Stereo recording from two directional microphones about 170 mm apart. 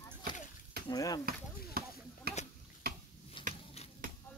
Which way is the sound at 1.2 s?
65° right (ahead or behind).